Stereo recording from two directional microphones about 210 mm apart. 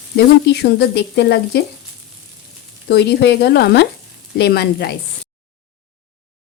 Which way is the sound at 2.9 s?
50° left (ahead or behind).